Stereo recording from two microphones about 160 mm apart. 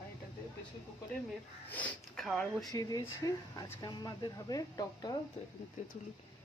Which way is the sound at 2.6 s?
25° left (ahead or behind).